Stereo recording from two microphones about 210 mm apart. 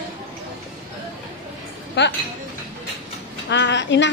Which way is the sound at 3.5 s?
55° left (ahead or behind).